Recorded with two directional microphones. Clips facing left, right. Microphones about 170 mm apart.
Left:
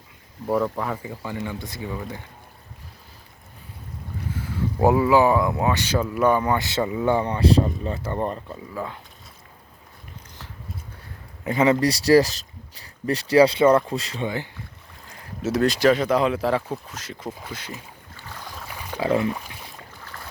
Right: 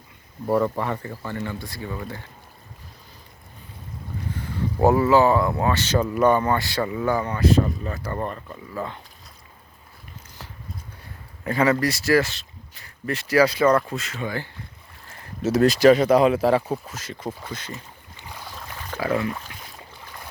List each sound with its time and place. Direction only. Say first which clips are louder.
0.4 s speech: right 1 dB; centre (ahead or behind); by 2.2 s 15° left (ahead or behind)
4.4 s speech: even; 10° left (ahead or behind)
6.6 s speech: left 1 dB; 20° left (ahead or behind)
8.7 s speech: right 1 dB; 5° left (ahead or behind)
11.4 s speech: left 1 dB; 20° left (ahead or behind)
11.9 s speech: left 4 dB; 35° left (ahead or behind)
15.1 s speech: right 2 dB; centre (ahead or behind)
18.2 s boat: even; 15° right (ahead or behind)
18.5 s a sound: left 1 dB; 10° left (ahead or behind)
19.0 s speech: left 2 dB; 25° left (ahead or behind)